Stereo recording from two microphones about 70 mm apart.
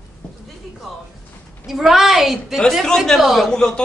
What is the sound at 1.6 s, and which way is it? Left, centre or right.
Speech, centre.